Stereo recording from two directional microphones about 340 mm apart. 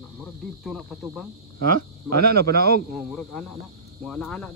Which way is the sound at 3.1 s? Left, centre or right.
Centre.